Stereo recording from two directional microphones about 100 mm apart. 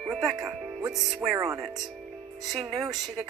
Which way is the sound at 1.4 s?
30° right (ahead or behind).